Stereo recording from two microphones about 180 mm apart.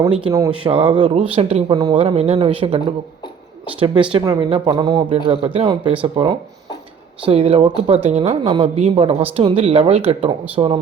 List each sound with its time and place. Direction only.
0.5 s speech: 30° right (ahead or behind)
1.7 s speech: 25° right (ahead or behind)